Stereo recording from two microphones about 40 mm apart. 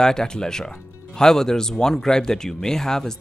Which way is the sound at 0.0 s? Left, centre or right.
Centre.